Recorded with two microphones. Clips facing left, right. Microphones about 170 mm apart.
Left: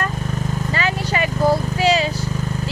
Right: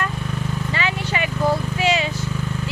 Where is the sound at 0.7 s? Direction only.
40° left (ahead or behind).